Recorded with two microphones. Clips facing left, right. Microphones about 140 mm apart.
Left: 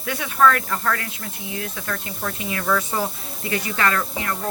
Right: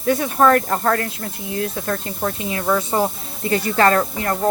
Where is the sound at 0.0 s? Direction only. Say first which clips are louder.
Right 3 dB; 40° right (ahead or behind).